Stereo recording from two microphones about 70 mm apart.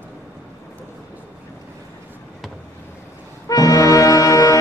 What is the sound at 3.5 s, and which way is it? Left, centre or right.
Music, left.